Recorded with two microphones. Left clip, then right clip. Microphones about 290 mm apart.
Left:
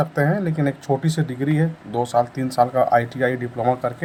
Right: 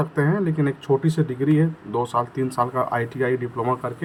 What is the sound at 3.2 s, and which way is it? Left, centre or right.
Speech, right.